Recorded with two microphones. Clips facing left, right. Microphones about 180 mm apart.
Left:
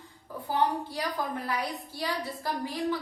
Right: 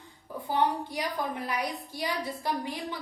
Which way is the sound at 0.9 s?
15° right (ahead or behind).